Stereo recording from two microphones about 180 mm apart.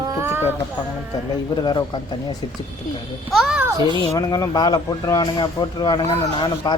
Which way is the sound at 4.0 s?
20° left (ahead or behind).